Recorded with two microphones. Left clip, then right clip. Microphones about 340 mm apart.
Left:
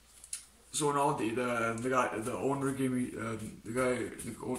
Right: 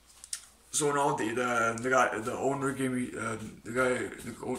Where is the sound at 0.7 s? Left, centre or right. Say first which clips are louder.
Right 2 dB; centre.